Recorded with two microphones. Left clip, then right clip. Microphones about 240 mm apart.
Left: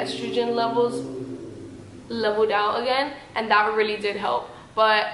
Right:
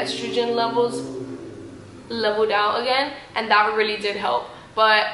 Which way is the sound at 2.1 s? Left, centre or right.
Centre.